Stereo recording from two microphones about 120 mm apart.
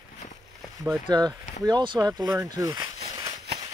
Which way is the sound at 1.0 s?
35° right (ahead or behind).